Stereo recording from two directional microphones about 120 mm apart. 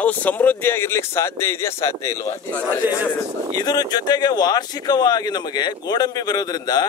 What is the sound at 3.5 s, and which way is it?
Speech, 35° left (ahead or behind).